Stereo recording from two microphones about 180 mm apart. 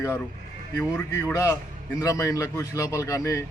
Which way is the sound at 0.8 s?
5° left (ahead or behind).